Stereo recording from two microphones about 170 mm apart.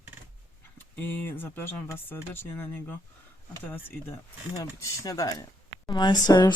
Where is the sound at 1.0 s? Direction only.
10° left (ahead or behind).